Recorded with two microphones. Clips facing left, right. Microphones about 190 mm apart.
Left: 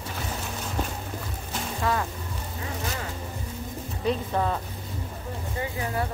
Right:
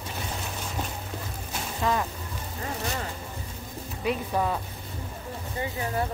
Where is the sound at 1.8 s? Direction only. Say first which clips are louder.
Right 1 dB; 15° right (ahead or behind).